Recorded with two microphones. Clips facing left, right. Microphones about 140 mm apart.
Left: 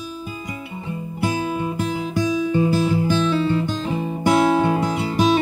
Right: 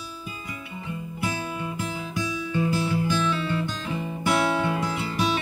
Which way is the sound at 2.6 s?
25° left (ahead or behind).